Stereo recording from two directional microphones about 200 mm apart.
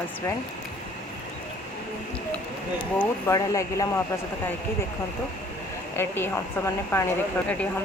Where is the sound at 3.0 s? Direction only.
15° left (ahead or behind).